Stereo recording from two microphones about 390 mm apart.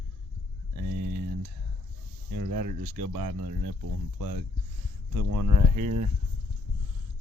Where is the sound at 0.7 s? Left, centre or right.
Right.